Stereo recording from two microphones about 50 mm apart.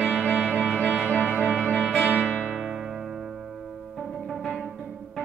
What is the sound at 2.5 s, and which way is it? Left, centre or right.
Music, centre.